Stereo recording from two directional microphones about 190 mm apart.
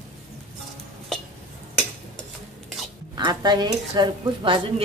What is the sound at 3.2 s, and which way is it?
Speech, 20° right (ahead or behind).